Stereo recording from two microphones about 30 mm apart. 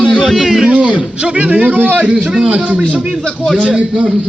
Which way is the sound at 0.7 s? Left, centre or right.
Right.